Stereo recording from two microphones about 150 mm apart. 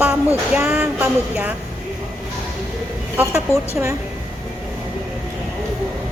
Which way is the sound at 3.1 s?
20° right (ahead or behind).